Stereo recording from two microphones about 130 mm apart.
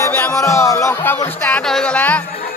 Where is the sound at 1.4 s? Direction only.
10° left (ahead or behind).